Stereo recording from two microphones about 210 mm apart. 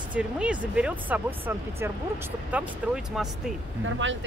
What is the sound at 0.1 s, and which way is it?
Speech, 5° right (ahead or behind).